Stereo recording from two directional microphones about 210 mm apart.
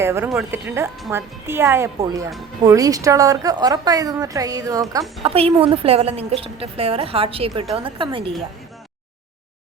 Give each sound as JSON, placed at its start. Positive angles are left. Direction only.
{"t": 0.0, "sound": "a woman's voice", "side_deg": -10}
{"t": 5.2, "sound": "a woman's voice", "side_deg": -30}